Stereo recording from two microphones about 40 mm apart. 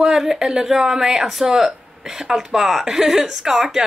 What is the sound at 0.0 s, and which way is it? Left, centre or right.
A woman's voice, centre.